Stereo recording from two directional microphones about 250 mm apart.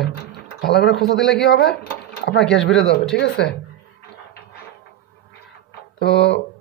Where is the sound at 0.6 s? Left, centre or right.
Left.